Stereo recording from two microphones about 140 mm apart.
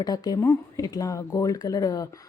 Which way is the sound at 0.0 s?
30° left (ahead or behind).